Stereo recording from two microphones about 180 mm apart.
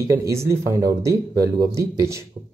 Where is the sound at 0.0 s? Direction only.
15° right (ahead or behind).